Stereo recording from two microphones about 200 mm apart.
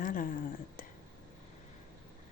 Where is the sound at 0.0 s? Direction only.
45° left (ahead or behind).